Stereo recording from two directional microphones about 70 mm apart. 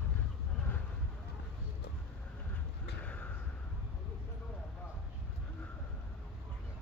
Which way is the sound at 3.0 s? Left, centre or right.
Centre.